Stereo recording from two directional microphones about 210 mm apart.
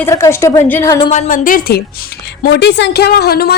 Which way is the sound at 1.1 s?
40° left (ahead or behind).